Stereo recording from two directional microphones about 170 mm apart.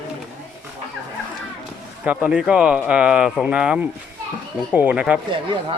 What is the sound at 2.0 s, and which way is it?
Speech, 5° right (ahead or behind).